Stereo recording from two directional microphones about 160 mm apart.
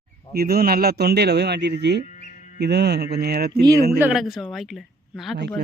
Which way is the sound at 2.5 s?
90° right.